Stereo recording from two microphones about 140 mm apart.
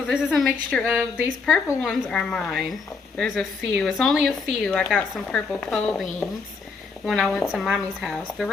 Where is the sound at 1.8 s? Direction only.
5° left (ahead or behind).